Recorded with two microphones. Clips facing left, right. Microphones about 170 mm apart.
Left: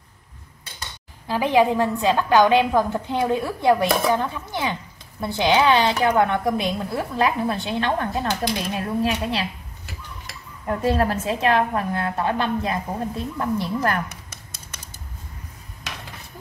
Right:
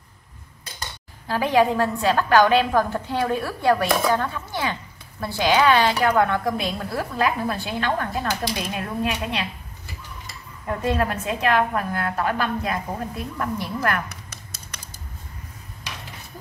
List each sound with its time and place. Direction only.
1.2 s a woman's voice: 15° left (ahead or behind); by 9.5 s 35° left (ahead or behind)
10.8 s a woman's voice: 35° left (ahead or behind)